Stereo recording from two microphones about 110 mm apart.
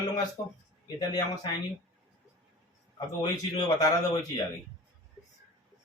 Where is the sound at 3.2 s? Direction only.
35° left (ahead or behind).